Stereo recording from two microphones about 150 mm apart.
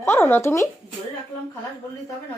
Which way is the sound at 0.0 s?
15° left (ahead or behind).